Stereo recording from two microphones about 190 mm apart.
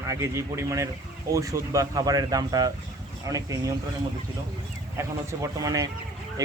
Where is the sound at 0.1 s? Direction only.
15° right (ahead or behind).